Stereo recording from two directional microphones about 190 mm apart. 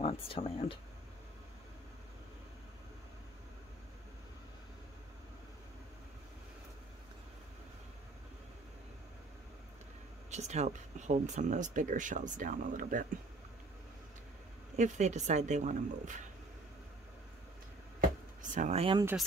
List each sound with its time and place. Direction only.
0.0 s speech: 30° left (ahead or behind)
10.3 s speech: 35° right (ahead or behind)
14.8 s speech: 35° right (ahead or behind)
18.4 s speech: 40° right (ahead or behind)